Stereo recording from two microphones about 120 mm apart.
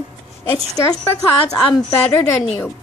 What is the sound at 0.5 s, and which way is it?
Child singing, 30° left (ahead or behind).